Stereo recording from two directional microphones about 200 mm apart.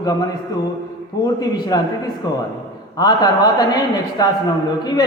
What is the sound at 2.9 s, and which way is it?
A man's voice, 20° left (ahead or behind).